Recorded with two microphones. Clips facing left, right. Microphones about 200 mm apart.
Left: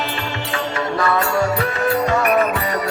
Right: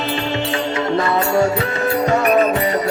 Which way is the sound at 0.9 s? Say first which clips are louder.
Right 2 dB; 25° right (ahead or behind).